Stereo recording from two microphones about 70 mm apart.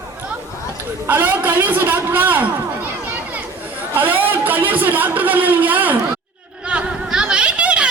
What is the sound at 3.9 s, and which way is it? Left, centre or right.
A man's voice, right.